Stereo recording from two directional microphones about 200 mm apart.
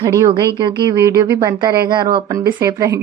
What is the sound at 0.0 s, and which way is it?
A woman's voice, 15° right (ahead or behind).